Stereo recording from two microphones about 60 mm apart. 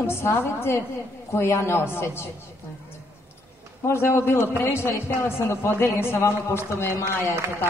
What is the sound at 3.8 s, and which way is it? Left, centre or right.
A man's voice, left.